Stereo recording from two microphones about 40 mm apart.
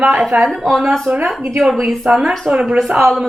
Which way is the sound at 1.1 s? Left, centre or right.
Right.